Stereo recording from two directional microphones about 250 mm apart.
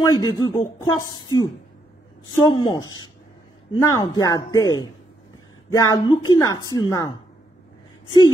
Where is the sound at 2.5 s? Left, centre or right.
Centre.